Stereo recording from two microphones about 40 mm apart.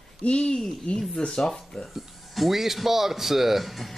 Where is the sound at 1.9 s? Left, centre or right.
Centre.